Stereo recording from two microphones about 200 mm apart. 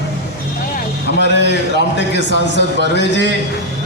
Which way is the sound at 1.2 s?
60° left (ahead or behind).